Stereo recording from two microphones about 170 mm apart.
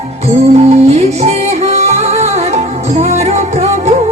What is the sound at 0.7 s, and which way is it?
Music, 40° right (ahead or behind).